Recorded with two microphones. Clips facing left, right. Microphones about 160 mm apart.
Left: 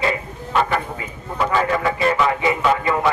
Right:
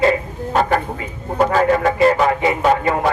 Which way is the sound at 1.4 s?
45° right (ahead or behind).